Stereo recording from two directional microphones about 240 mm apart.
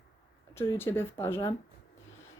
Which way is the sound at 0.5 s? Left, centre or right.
Centre.